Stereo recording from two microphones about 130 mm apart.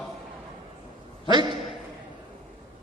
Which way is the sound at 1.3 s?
35° right (ahead or behind).